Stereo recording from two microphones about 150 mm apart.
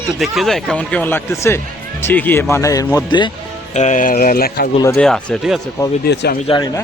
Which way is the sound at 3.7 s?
55° left (ahead or behind).